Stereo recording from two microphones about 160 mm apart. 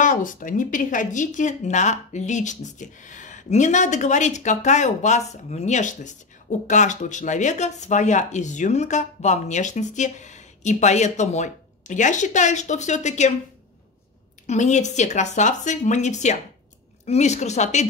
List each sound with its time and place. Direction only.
0.0 s speech: 55° left (ahead or behind)
14.4 s speech: 45° left (ahead or behind)